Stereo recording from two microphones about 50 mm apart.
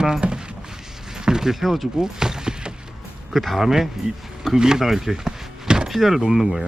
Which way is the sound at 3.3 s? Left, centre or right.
Centre.